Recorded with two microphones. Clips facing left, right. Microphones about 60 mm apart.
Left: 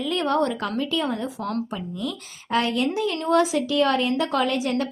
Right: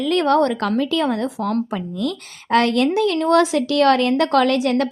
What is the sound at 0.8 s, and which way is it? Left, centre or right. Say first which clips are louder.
Speech: right 5 dB; right.